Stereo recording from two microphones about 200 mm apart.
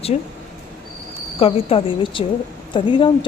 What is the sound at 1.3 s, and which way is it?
A woman's voice, 25° left (ahead or behind).